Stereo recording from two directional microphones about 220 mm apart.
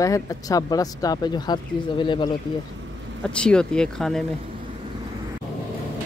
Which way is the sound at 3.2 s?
5° left (ahead or behind).